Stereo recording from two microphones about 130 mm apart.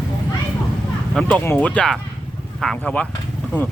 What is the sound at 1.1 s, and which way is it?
Speech, 10° left (ahead or behind).